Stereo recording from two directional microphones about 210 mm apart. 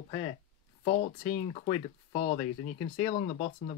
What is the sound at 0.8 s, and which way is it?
Speech, 35° left (ahead or behind).